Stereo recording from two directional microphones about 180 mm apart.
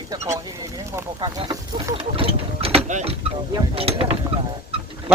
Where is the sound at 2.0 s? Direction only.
30° right (ahead or behind).